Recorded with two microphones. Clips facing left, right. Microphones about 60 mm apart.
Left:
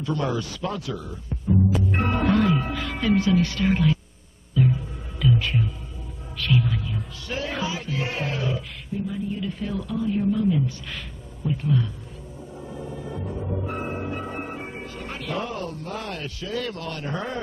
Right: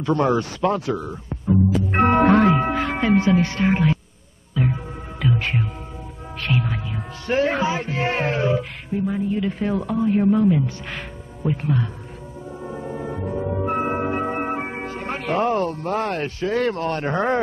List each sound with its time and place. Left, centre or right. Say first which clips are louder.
0.1 s speech: right 7 dB; right
0.6 s speech: right 8 dB; right
1.3 s music: right 3 dB; right
5.4 s music: right 2 dB; right
7.2 s speech: right 9 dB; right
8.5 s music: right 6 dB; right
9.4 s speech: right 6 dB; right
12.6 s music: right 6 dB; right
13.9 s speech: right 7 dB; right